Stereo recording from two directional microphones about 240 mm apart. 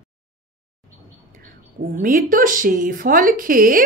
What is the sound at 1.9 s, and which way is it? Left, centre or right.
Speech, right.